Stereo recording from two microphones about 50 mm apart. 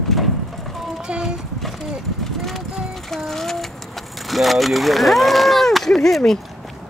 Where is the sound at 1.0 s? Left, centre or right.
Centre.